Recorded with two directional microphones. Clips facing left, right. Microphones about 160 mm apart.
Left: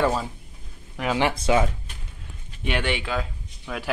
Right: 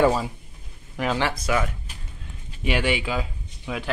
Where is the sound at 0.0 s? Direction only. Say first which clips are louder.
Right 3 dB; 10° right (ahead or behind).